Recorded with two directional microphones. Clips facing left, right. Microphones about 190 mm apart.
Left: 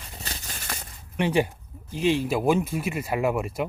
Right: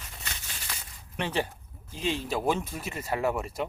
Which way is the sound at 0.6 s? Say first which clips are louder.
Left 5 dB; 50° left (ahead or behind).